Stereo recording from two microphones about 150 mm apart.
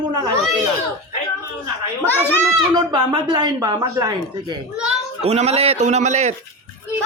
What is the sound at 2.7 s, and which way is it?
Speech, 30° right (ahead or behind).